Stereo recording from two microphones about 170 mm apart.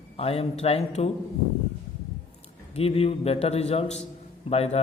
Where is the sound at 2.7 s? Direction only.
35° left (ahead or behind).